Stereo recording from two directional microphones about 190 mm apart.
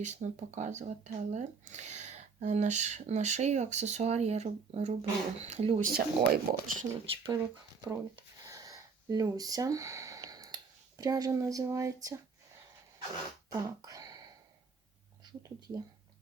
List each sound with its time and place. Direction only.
0.0 s speech: 40° right (ahead or behind)
5.9 s speech: 55° right (ahead or behind)
7.0 s speech: 30° right (ahead or behind)
7.9 s speech: 20° right (ahead or behind)
13.5 s a sound: 20° right (ahead or behind)
15.2 s speech: 20° right (ahead or behind)